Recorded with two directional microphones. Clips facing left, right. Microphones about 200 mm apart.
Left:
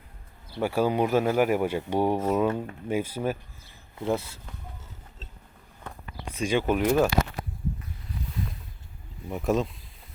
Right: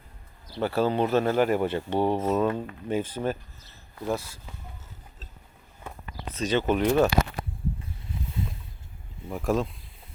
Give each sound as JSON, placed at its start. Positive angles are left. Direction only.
{"t": 0.6, "sound": "speech", "side_deg": 10}
{"t": 3.9, "sound": "speech", "side_deg": 20}
{"t": 6.2, "sound": "speech", "side_deg": 10}
{"t": 8.1, "sound": "boat", "side_deg": -25}
{"t": 9.3, "sound": "speech", "side_deg": 0}